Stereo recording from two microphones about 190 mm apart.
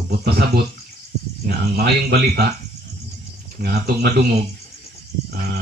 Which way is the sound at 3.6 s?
55° right (ahead or behind).